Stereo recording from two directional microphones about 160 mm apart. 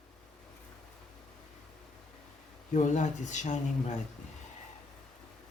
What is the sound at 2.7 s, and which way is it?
Speech, 50° left (ahead or behind).